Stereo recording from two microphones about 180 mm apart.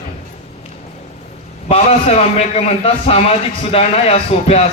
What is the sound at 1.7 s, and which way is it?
A man's voice, 35° left (ahead or behind).